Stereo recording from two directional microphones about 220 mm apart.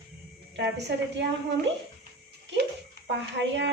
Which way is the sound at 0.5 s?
50° right (ahead or behind).